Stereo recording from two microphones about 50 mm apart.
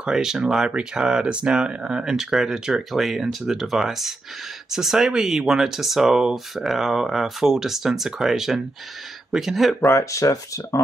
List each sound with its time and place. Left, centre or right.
0.0 s speech: centre
9.8 s speech: left